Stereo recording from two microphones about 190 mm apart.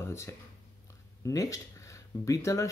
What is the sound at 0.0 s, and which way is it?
Speech, 15° left (ahead or behind).